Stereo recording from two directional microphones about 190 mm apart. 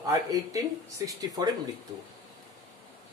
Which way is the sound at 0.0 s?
20° right (ahead or behind).